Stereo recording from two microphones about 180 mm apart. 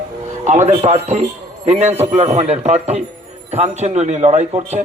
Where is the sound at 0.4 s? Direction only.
40° right (ahead or behind).